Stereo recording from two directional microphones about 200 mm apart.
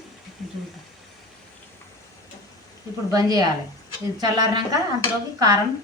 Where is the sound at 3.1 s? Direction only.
20° right (ahead or behind).